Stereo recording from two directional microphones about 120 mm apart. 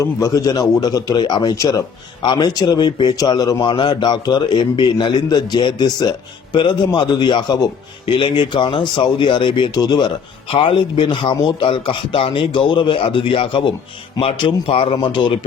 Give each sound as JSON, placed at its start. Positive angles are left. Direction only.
{"t": 0.0, "sound": "a man's voice", "side_deg": 30}
{"t": 10.5, "sound": "a man's voice", "side_deg": 50}